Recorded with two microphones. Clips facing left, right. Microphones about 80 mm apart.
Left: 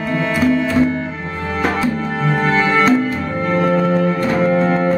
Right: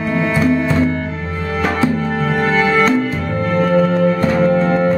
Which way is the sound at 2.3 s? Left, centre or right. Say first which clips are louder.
Left 1 dB; centre.